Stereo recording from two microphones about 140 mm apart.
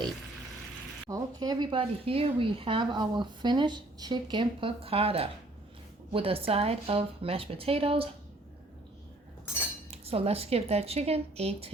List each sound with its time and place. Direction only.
1.1 s speech: 30° right (ahead or behind)
9.9 s speech: 45° right (ahead or behind)